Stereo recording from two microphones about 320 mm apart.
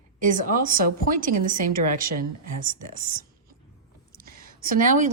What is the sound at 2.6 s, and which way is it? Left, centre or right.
A woman's voice, right.